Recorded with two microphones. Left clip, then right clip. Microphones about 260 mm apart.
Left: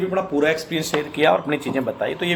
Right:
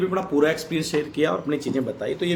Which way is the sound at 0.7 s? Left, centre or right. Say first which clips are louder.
Left 2 dB; centre.